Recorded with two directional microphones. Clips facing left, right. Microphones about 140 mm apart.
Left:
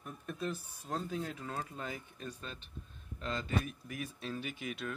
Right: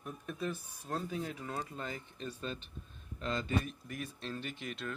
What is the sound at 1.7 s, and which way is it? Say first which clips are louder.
Speech: right 1 dB; 10° left (ahead or behind).